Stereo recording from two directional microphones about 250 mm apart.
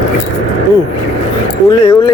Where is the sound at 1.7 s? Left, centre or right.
Centre.